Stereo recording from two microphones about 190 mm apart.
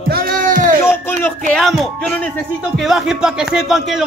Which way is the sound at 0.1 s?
50° right (ahead or behind).